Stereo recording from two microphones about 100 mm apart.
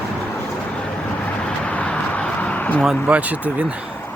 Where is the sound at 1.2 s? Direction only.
15° left (ahead or behind).